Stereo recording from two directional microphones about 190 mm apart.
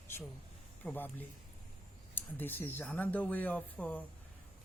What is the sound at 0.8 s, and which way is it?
Speech, 10° left (ahead or behind).